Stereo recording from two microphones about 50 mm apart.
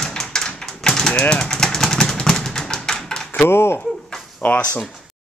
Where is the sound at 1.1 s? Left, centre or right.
Left.